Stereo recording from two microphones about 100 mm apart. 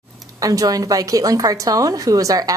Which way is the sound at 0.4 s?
35° right (ahead or behind).